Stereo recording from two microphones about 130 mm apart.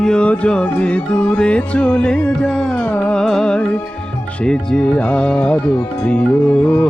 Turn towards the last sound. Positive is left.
turn(degrees=15)  # may be behind; listen again after turning